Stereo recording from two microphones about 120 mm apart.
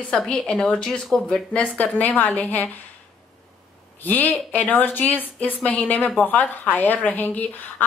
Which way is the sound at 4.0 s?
15° left (ahead or behind).